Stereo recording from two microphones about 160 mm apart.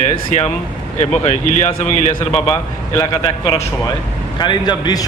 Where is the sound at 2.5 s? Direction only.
20° left (ahead or behind).